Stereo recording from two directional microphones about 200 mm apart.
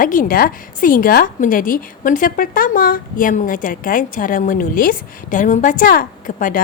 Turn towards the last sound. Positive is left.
turn(degrees=45)  # may be behind; listen again after turning